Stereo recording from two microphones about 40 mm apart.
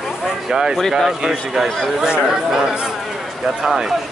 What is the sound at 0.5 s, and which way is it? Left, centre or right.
A man's voice, centre.